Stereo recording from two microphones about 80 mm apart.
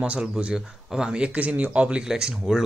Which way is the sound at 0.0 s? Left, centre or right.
Centre.